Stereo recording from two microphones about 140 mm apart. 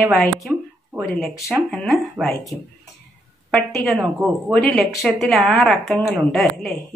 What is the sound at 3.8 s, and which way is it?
Speech, centre (ahead or behind).